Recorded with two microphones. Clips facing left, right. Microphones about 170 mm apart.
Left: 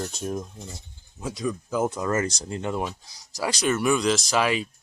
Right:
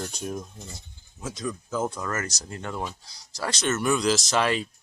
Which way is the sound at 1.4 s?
10° left (ahead or behind).